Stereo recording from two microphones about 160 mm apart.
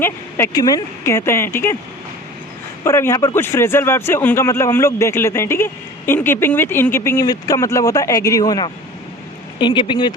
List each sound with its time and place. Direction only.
0.0 s a man's voice: 15° left (ahead or behind)
2.8 s a man's voice: 15° left (ahead or behind)